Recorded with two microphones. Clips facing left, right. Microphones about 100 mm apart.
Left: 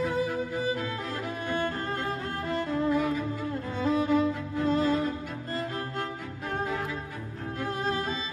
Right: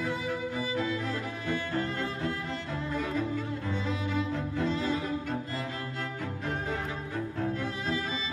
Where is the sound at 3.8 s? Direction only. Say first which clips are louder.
Left 12 dB; 45° left (ahead or behind).